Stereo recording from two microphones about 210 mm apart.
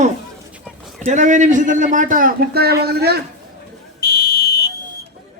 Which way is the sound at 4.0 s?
45° left (ahead or behind).